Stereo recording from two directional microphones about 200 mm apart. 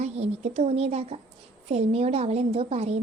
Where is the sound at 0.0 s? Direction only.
35° right (ahead or behind).